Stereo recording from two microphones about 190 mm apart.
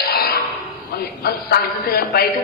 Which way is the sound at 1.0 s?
55° left (ahead or behind).